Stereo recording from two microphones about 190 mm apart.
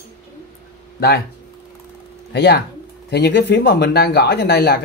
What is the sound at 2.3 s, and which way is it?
Speech, 65° left (ahead or behind).